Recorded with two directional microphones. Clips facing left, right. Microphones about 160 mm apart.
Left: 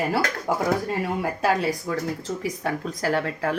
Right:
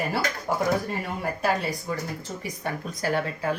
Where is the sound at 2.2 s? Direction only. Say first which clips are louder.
Left 5 dB; 90° left.